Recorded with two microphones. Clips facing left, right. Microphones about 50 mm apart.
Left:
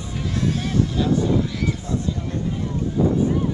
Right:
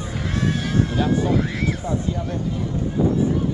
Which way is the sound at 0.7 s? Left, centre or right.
Right.